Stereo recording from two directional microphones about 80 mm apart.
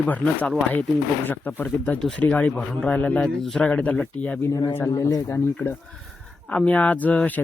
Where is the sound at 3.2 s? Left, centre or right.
Centre.